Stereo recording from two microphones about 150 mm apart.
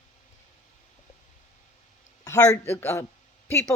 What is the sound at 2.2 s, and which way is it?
Speech, 20° left (ahead or behind).